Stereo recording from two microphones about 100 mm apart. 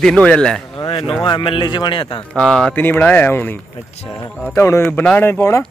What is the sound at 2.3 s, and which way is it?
Speech, 5° left (ahead or behind).